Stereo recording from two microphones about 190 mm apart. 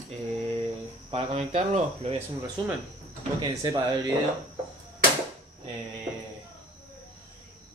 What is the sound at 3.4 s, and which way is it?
Speech, 20° right (ahead or behind).